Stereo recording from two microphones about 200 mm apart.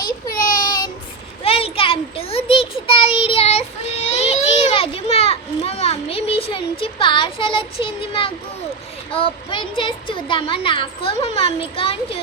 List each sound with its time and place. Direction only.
0.3 s child singing: 45° left (ahead or behind)
0.6 s child singing: 20° left (ahead or behind)
4.1 s children playing: 30° left (ahead or behind)
9.1 s speech: 25° left (ahead or behind)